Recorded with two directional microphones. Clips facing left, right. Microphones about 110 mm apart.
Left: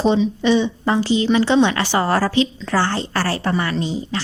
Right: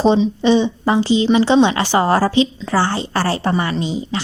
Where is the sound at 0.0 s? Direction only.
30° right (ahead or behind).